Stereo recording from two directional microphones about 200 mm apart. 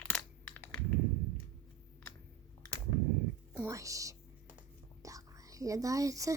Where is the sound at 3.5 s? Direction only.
10° right (ahead or behind).